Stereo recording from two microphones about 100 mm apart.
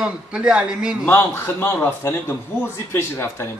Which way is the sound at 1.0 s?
25° left (ahead or behind).